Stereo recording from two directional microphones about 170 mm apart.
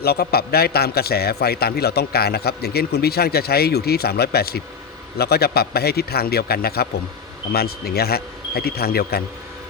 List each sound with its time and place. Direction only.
0.0 s a man's voice: 70° left (ahead or behind)